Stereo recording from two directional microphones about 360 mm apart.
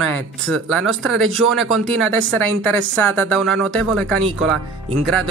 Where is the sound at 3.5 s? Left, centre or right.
Centre.